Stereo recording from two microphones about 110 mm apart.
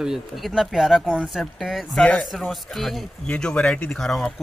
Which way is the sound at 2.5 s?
Centre (ahead or behind).